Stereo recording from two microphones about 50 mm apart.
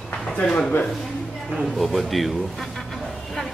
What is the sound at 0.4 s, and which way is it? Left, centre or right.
Speech, left.